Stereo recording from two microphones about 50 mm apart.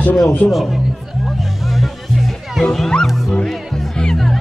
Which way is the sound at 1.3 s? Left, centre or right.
Centre.